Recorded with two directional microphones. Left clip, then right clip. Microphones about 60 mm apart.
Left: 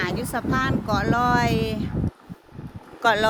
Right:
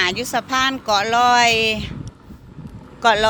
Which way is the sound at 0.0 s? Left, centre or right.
Centre.